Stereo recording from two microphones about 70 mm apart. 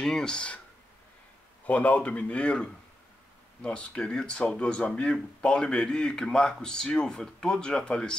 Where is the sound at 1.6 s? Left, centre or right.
Centre.